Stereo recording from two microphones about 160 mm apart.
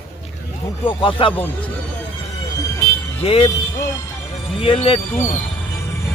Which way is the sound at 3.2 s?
35° left (ahead or behind).